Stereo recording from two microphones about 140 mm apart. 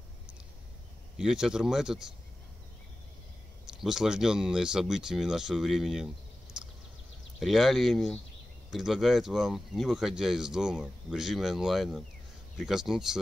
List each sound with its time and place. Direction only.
1.1 s speech: 5° right (ahead or behind)
3.6 s speech: 5° right (ahead or behind)
7.3 s speech: centre (ahead or behind)